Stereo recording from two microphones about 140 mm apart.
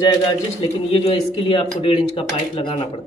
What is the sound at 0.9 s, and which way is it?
Speech, 40° left (ahead or behind).